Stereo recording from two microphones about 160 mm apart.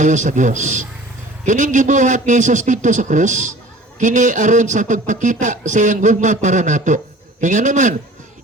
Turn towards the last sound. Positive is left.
turn(degrees=-50)  # may be behind; listen again after turning